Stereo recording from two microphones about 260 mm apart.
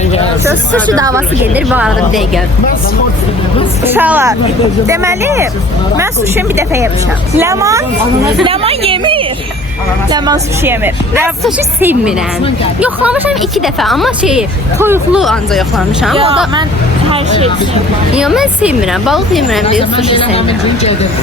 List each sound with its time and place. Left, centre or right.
0.9 s a woman's voice: centre
3.9 s a woman's voice: centre
18.1 s a woman's voice: centre
19.8 s speech: centre